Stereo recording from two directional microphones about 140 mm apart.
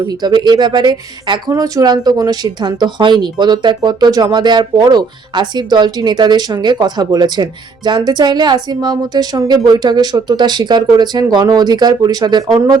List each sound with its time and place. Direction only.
0.1 s a woman's voice: 30° right (ahead or behind)